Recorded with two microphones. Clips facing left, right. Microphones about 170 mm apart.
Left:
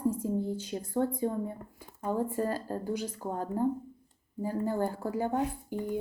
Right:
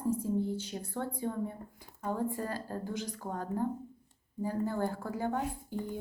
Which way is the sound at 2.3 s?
40° left (ahead or behind).